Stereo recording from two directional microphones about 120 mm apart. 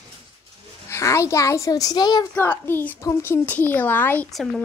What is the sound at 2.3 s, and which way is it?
Speech, 15° left (ahead or behind).